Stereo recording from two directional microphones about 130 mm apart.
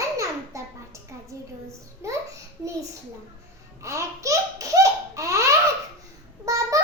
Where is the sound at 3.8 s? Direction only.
25° right (ahead or behind).